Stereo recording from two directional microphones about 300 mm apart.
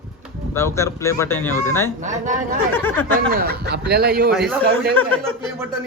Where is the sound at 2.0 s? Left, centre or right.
Right.